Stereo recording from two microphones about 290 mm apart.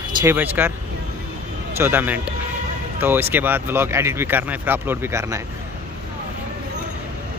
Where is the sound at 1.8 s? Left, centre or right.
Centre.